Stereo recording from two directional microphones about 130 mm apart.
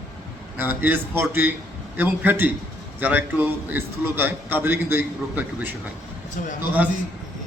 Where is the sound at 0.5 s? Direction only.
15° right (ahead or behind).